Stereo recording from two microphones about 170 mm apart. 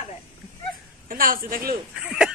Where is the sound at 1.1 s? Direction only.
55° right (ahead or behind).